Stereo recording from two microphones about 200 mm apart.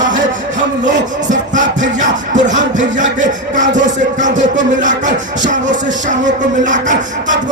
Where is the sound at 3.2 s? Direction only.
40° right (ahead or behind).